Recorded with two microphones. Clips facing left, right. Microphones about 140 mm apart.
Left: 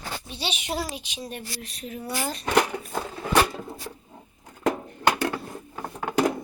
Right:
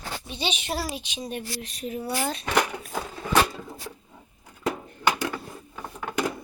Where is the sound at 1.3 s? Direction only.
Centre (ahead or behind).